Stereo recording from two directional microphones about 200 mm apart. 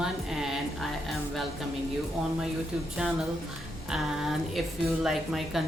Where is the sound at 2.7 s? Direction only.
5° right (ahead or behind).